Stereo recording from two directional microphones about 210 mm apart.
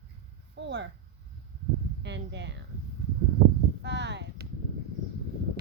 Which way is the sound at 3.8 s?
55° right (ahead or behind).